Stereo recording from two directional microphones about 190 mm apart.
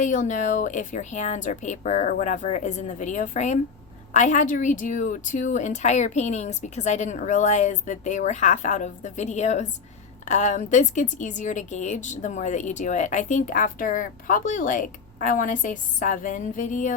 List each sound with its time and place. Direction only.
0.0 s a woman's voice: 40° left (ahead or behind)